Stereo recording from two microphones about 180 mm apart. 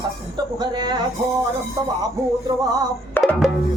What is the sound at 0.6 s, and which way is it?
Speech, 25° right (ahead or behind).